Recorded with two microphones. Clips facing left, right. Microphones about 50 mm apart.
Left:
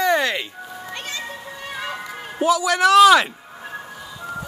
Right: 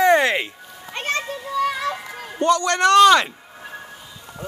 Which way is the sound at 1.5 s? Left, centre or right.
Right.